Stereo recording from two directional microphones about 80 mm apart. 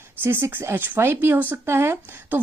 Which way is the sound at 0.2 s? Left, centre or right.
Right.